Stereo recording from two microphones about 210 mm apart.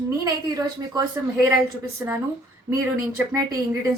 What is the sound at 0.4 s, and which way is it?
Speech, 20° right (ahead or behind).